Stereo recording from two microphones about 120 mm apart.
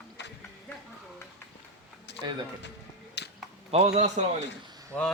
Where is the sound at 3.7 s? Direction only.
65° right (ahead or behind).